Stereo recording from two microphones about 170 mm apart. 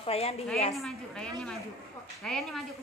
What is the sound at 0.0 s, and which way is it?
Speech, 35° left (ahead or behind).